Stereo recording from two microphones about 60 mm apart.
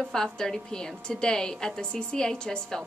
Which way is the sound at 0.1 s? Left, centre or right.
Centre.